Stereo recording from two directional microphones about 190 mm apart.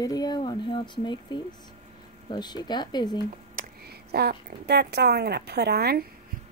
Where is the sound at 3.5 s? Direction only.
50° right (ahead or behind).